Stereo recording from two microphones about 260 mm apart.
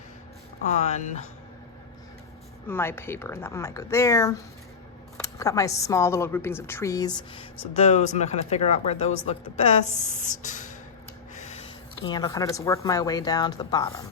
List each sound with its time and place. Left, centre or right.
0.6 s a woman's voice: left
2.6 s a woman's voice: centre; by 10.8 s left
12.0 s a woman's voice: centre